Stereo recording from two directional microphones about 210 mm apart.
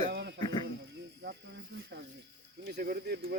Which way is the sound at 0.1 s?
55° right (ahead or behind).